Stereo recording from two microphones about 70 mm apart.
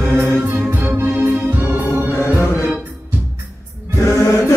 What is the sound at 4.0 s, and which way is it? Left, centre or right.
Music, left.